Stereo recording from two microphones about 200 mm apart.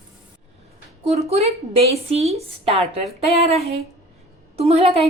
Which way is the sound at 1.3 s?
30° right (ahead or behind).